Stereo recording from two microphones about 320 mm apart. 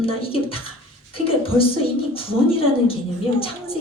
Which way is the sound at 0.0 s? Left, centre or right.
Centre.